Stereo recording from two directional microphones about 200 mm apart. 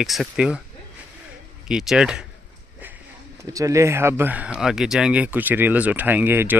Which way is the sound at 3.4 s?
15° right (ahead or behind).